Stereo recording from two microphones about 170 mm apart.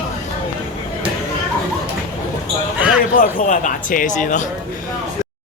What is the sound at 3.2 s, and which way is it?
Speech, 50° left (ahead or behind).